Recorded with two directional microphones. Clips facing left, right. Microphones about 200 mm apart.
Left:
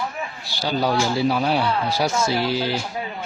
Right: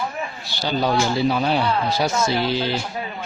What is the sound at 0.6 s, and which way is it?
A man's voice, 5° left (ahead or behind).